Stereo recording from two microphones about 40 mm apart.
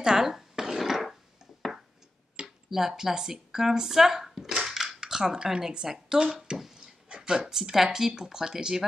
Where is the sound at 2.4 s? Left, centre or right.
Centre.